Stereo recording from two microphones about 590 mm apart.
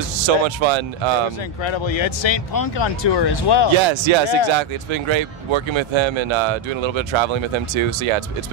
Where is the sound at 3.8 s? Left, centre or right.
Right.